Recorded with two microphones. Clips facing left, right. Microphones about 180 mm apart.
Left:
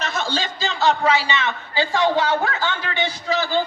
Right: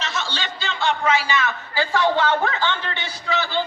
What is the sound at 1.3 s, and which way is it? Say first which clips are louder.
A man's voice: even; 20° left (ahead or behind).